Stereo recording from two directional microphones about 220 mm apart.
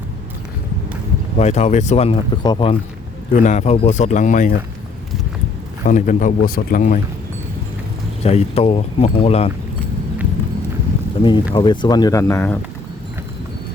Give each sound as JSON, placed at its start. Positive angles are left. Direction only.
{"t": 1.4, "sound": "speech", "side_deg": 30}
{"t": 3.3, "sound": "speech", "side_deg": 35}
{"t": 5.8, "sound": "speech", "side_deg": 35}
{"t": 8.2, "sound": "speech", "side_deg": 30}
{"t": 11.2, "sound": "speech", "side_deg": 20}